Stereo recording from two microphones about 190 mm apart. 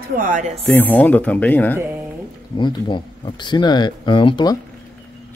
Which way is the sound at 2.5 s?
25° left (ahead or behind).